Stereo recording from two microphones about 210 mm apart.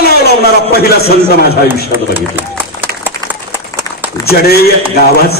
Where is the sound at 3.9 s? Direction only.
15° left (ahead or behind).